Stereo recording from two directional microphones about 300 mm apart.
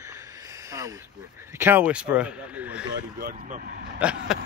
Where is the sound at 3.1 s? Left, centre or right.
Right.